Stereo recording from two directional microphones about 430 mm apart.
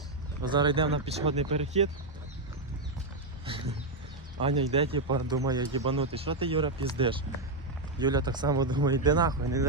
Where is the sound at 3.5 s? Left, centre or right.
Centre.